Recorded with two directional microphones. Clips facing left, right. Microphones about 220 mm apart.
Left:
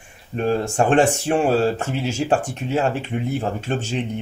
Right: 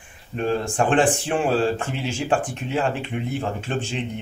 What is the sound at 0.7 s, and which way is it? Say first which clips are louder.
A woman's voice: left 2 dB; 45° left (ahead or behind).